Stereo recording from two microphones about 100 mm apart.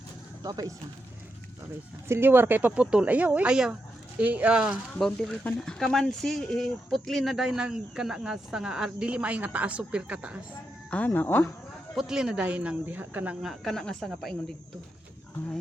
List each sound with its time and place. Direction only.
0.4 s speech: 40° right (ahead or behind)
2.0 s speech: 25° right (ahead or behind)
4.9 s speech: 5° left (ahead or behind); by 10.4 s 15° right (ahead or behind)
10.9 s speech: 15° left (ahead or behind)
11.9 s speech: 5° right (ahead or behind)
13.4 s speech: centre (ahead or behind)